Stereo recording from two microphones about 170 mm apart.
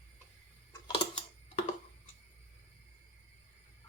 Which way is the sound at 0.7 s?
25° left (ahead or behind).